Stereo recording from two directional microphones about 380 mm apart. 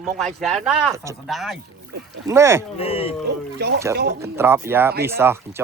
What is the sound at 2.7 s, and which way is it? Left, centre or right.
Speech, centre.